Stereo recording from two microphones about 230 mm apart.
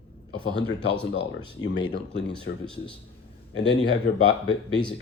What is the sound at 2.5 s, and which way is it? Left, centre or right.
A man's voice, left.